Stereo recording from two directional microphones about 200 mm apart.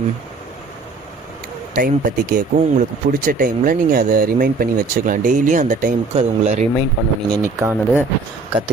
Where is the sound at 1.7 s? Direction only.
45° right (ahead or behind).